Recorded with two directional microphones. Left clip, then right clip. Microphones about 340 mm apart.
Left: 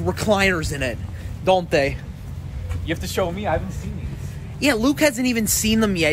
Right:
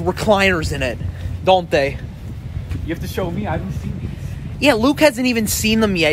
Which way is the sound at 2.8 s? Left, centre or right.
Left.